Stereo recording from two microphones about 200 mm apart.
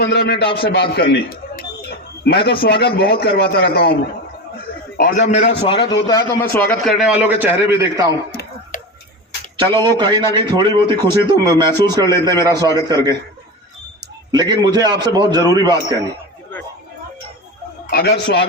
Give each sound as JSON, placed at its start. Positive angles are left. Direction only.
{"t": 0.0, "sound": "a man's voice", "side_deg": 60}
{"t": 1.1, "sound": "a sound", "side_deg": 50}
{"t": 2.6, "sound": "a man's voice", "side_deg": 55}
{"t": 4.9, "sound": "a man's voice", "side_deg": 40}
{"t": 8.3, "sound": "a sound", "side_deg": 55}
{"t": 10.0, "sound": "speech", "side_deg": -25}
{"t": 14.3, "sound": "speech", "side_deg": -20}
{"t": 17.9, "sound": "a man's voice", "side_deg": 55}